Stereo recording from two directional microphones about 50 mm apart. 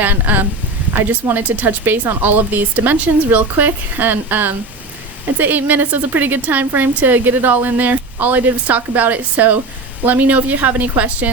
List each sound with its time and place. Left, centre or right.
0.0 s a woman's voice: right